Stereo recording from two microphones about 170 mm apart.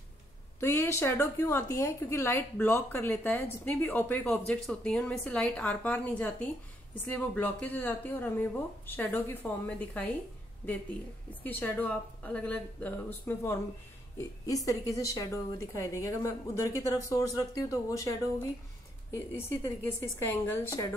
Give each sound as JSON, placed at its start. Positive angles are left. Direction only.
{"t": 0.6, "sound": "a woman's voice", "side_deg": 15}